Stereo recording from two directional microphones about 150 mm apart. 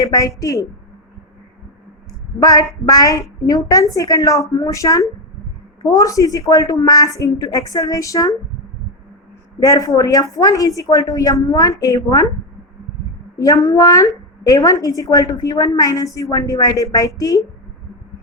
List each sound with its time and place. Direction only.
0.0 s a woman's voice: 25° left (ahead or behind)
2.4 s a woman's voice: 25° left (ahead or behind)
9.6 s a woman's voice: 25° left (ahead or behind)
13.4 s a woman's voice: 20° left (ahead or behind)